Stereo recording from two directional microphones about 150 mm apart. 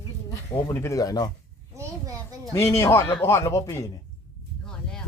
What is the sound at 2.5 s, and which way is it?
A man's voice, 20° left (ahead or behind).